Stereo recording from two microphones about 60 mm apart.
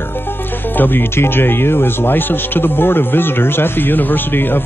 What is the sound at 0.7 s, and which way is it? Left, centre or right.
Speech, left.